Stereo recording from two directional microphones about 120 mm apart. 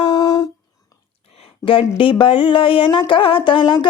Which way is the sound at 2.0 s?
45° left (ahead or behind).